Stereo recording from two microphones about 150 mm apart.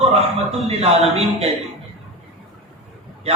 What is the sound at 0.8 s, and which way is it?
Speech, 45° right (ahead or behind).